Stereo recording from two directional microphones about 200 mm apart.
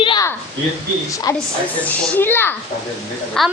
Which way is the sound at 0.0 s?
25° left (ahead or behind).